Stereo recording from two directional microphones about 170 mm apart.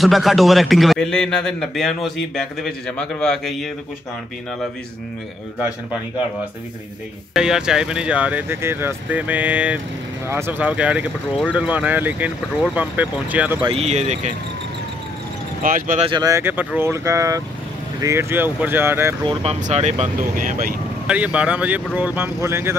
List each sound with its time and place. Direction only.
0.0 s a man's voice: centre (ahead or behind)
7.3 s speech: 5° right (ahead or behind)
13.6 s speech: 35° right (ahead or behind)
15.6 s speech: 50° right (ahead or behind)
16.0 s speech: 25° right (ahead or behind)
19.6 s speech: 45° right (ahead or behind)
21.1 s speech: 5° right (ahead or behind)